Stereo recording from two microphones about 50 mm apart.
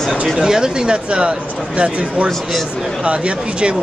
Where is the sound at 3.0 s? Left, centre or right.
Right.